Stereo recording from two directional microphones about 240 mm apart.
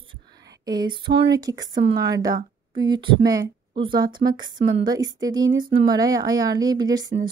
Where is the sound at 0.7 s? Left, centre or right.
Centre.